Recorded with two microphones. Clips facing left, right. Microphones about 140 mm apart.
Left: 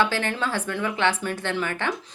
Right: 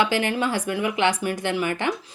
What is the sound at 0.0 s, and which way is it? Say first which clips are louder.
A woman's voice: right 2 dB; 15° right (ahead or behind).